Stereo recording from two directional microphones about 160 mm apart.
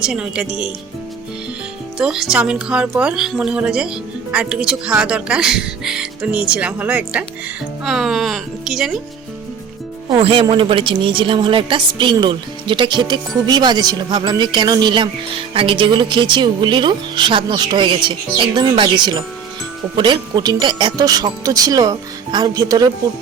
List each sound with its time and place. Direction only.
0.0 s speech: 5° right (ahead or behind)
2.0 s speech: 5° right (ahead or behind)
10.1 s a woman's voice: 35° right (ahead or behind)